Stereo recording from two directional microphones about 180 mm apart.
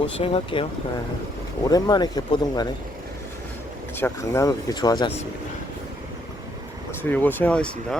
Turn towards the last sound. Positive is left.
turn(degrees=5)  # may be behind; listen again after turning